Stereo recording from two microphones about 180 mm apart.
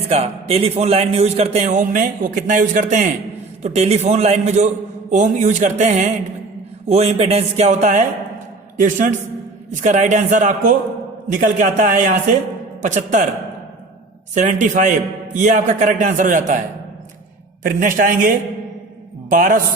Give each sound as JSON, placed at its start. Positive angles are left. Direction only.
{"t": 0.1, "sound": "a man's voice", "side_deg": -35}
{"t": 14.3, "sound": "a man's voice", "side_deg": -40}